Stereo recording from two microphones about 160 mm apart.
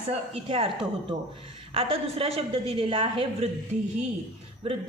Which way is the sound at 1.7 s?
35° right (ahead or behind).